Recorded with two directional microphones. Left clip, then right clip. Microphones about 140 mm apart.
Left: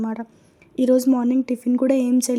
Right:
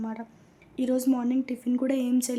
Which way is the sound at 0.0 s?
40° left (ahead or behind).